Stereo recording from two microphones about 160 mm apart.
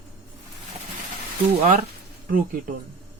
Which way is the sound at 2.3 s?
60° right (ahead or behind).